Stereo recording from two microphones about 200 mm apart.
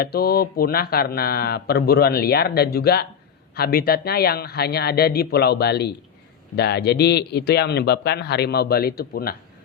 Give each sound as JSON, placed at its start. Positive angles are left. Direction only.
{"t": 0.0, "sound": "a man's voice", "side_deg": 50}